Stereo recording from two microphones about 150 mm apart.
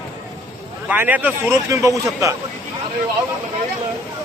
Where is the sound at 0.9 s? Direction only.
10° right (ahead or behind).